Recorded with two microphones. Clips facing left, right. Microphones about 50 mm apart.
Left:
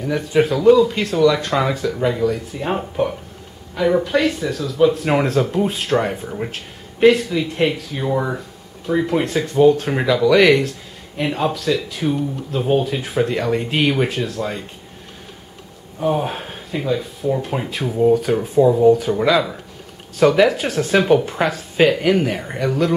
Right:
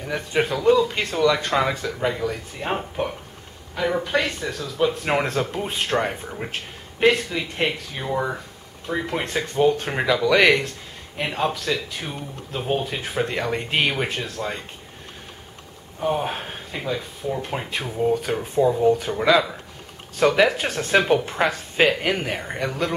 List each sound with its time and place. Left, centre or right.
0.0 s speech: centre
16.0 s speech: centre